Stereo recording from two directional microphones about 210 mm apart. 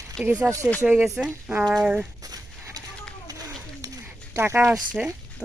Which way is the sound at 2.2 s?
15° right (ahead or behind).